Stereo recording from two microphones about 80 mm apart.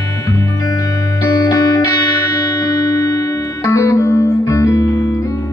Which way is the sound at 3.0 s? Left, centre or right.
Left.